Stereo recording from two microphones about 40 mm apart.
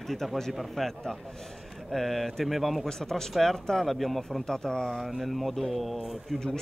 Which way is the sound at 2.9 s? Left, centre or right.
Centre.